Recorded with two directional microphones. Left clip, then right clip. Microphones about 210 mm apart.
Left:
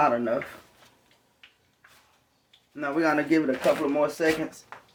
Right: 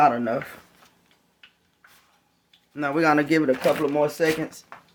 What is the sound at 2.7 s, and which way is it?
Speech, 50° right (ahead or behind).